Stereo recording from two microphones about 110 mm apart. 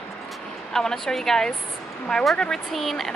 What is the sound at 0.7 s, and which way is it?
Speech, 5° left (ahead or behind).